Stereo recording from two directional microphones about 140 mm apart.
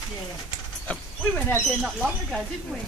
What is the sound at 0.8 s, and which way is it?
Speech, 10° left (ahead or behind).